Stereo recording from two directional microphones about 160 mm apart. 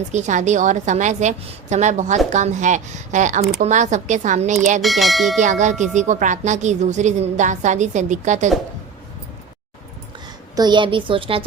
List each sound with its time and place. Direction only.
0.1 s a woman's voice: 50° right (ahead or behind)
4.8 s speech: centre (ahead or behind)
5.4 s a woman's voice: 50° right (ahead or behind)
10.5 s a woman's voice: 25° right (ahead or behind)